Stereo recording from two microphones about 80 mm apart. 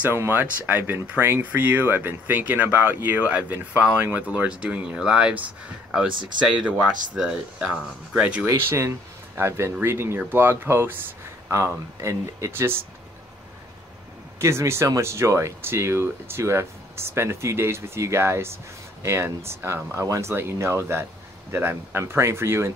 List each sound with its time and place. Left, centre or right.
0.0 s speech: right
6.1 s speech: right
6.4 s speech: centre
8.6 s speech: right
12.0 s speech: right
14.4 s speech: right